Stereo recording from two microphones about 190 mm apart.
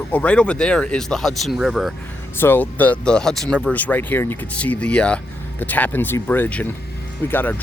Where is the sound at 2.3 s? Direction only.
10° left (ahead or behind).